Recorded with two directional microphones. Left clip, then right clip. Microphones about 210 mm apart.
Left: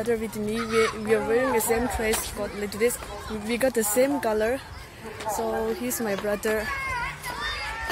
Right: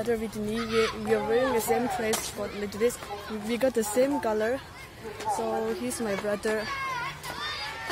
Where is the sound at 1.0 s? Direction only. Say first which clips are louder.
Left 2 dB; 15° left (ahead or behind).